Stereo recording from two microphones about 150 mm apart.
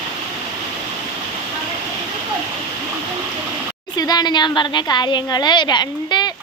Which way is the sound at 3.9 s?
25° left (ahead or behind).